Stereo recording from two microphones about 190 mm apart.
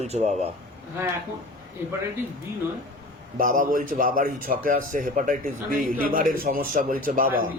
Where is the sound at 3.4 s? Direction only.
45° right (ahead or behind).